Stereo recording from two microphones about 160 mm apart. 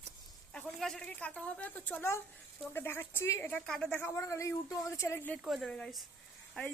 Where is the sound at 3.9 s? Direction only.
15° left (ahead or behind).